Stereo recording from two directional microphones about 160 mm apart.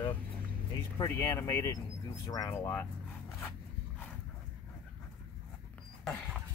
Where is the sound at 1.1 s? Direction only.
15° left (ahead or behind).